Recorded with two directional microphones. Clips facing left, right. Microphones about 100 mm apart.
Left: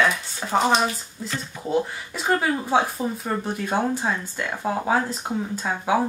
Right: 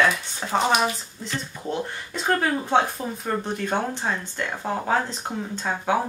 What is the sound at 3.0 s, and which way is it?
Speech, 20° left (ahead or behind).